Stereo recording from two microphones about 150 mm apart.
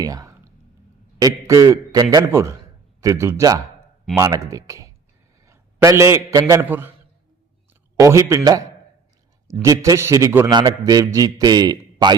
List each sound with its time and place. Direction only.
0.0 s whispering: 25° right (ahead or behind)
1.2 s a man's voice: 20° right (ahead or behind)
5.5 s a sound: 20° right (ahead or behind)
6.5 s a man's voice: 15° right (ahead or behind)